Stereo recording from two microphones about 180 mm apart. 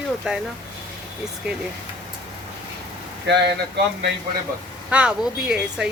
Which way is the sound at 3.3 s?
75° right (ahead or behind).